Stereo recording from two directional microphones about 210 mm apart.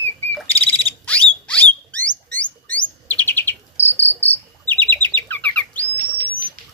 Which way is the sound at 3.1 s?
10° left (ahead or behind).